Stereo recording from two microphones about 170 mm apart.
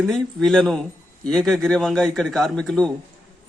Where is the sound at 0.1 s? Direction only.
Centre (ahead or behind).